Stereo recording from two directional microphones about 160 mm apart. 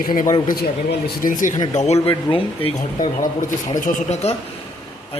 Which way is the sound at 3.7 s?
55° left (ahead or behind).